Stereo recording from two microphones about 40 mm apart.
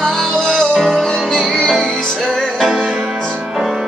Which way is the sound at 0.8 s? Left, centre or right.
Centre.